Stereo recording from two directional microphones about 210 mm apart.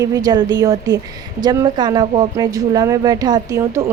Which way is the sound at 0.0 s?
15° right (ahead or behind).